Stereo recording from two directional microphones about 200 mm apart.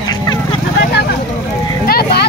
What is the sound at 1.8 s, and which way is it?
Vehicle, 50° left (ahead or behind).